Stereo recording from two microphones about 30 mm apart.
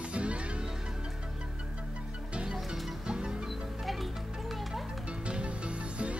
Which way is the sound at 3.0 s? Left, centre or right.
Right.